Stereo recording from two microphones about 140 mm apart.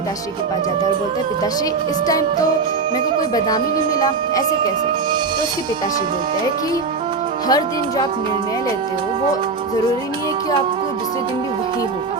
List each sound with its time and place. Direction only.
7.4 s speech: 25° left (ahead or behind)